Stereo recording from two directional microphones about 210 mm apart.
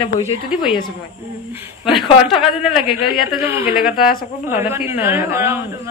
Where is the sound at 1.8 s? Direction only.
25° left (ahead or behind).